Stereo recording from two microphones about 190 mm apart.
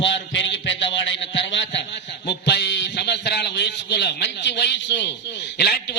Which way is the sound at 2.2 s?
65° left (ahead or behind).